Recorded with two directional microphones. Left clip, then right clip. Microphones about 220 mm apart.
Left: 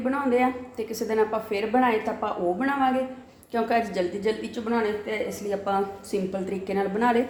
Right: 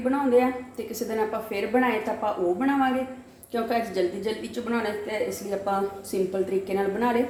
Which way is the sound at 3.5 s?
30° left (ahead or behind).